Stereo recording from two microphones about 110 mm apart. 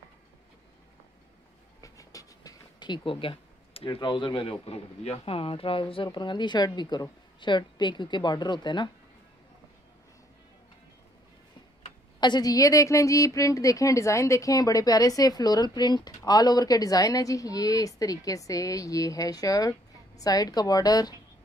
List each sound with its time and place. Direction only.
1.8 s a sound: 30° left (ahead or behind)
2.8 s speech: 45° left (ahead or behind)
6.0 s a woman's voice: 45° left (ahead or behind)
12.2 s a woman's voice: 40° left (ahead or behind)